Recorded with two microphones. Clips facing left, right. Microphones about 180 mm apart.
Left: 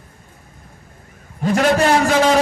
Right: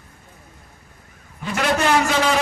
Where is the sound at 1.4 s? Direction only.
40° left (ahead or behind).